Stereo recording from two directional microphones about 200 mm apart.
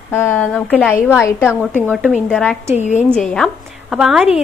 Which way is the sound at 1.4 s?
5° right (ahead or behind).